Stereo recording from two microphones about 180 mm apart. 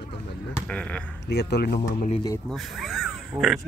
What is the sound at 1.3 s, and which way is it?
Speech, 65° left (ahead or behind).